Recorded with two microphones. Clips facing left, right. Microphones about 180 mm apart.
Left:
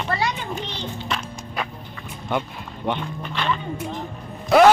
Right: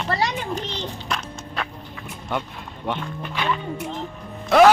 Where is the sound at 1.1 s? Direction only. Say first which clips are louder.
Even; centre (ahead or behind).